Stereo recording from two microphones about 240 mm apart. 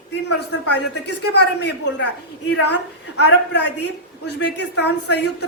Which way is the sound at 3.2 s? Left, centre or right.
Left.